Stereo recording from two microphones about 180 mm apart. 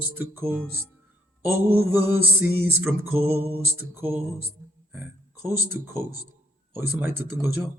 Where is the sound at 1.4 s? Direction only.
10° right (ahead or behind).